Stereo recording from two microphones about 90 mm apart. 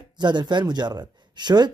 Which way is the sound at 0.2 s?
55° right (ahead or behind).